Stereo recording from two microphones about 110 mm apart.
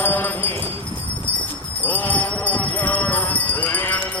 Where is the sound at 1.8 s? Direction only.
15° left (ahead or behind).